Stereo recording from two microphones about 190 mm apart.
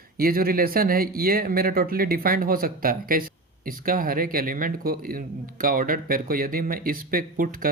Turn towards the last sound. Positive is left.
turn(degrees=-50)  # may be behind; listen again after turning